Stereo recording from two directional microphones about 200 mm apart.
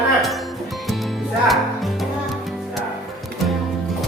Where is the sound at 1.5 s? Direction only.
Centre (ahead or behind).